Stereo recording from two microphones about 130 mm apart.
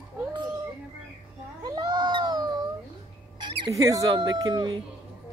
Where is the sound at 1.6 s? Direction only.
35° right (ahead or behind).